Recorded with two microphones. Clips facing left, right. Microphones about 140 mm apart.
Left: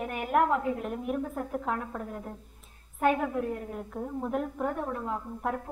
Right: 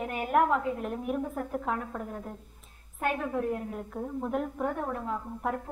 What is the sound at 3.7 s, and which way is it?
A woman's voice, centre (ahead or behind).